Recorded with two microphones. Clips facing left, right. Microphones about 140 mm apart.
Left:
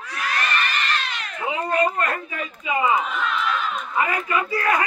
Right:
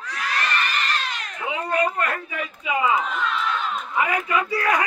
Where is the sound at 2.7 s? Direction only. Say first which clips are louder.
Left 1 dB; 10° left (ahead or behind).